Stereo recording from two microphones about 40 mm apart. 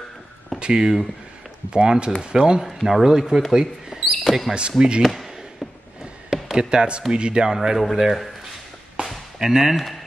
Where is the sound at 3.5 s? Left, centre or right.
Centre.